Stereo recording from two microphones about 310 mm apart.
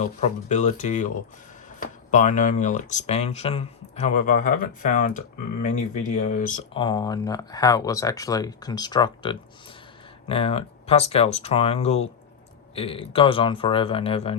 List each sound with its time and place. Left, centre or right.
0.0 s speech: left